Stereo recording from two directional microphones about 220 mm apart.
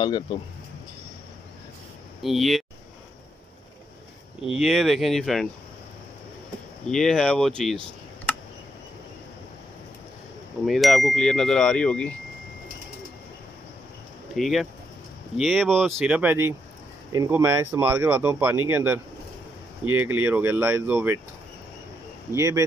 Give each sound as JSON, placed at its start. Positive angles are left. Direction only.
{"t": 0.0, "sound": "speech", "side_deg": 20}
{"t": 2.2, "sound": "speech", "side_deg": 0}
{"t": 4.5, "sound": "speech", "side_deg": 0}
{"t": 6.9, "sound": "speech", "side_deg": 0}
{"t": 10.6, "sound": "speech", "side_deg": 0}
{"t": 14.3, "sound": "speech", "side_deg": 0}
{"t": 22.3, "sound": "speech", "side_deg": -15}